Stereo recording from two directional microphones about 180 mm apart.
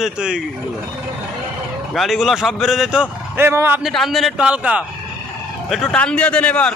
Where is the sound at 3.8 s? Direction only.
Centre (ahead or behind).